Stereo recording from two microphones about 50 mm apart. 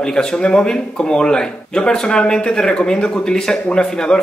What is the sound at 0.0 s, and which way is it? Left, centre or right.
Speech, centre.